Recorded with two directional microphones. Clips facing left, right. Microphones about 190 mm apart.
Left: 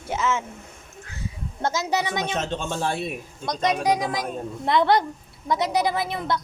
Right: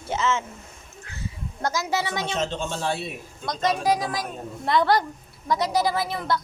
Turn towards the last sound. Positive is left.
turn(degrees=20)  # may be behind; listen again after turning